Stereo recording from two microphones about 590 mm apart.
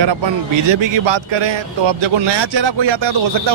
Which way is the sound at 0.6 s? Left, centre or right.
Right.